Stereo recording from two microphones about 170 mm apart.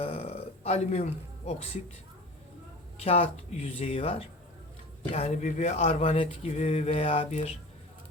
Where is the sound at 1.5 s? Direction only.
35° left (ahead or behind).